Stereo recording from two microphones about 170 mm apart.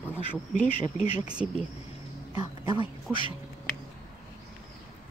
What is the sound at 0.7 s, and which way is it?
Speech, 35° left (ahead or behind).